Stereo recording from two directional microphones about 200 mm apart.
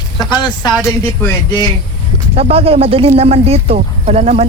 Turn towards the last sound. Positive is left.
turn(degrees=-30)  # may be behind; listen again after turning